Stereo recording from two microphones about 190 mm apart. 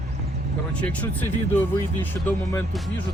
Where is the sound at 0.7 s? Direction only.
5° left (ahead or behind).